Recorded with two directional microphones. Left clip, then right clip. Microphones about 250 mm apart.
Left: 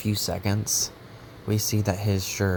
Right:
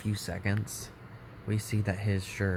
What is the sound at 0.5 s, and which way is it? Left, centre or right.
Speech, centre.